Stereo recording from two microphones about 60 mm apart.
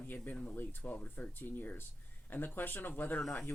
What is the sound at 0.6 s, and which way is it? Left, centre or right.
Speech, left.